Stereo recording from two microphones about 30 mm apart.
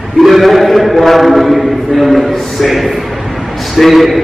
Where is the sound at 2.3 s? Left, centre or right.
Centre.